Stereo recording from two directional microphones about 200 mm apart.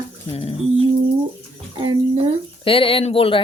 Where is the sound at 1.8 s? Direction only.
25° right (ahead or behind).